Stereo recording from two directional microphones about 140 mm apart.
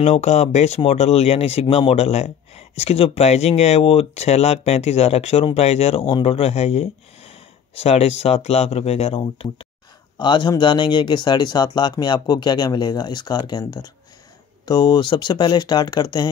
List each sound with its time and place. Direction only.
0.0 s speech: 55° left (ahead or behind)
10.1 s speech: 30° left (ahead or behind)